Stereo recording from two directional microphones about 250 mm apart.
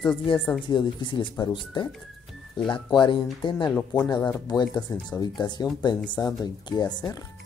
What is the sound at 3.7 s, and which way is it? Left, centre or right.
Speech, centre.